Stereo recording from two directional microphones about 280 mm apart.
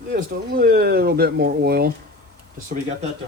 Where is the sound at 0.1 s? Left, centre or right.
Right.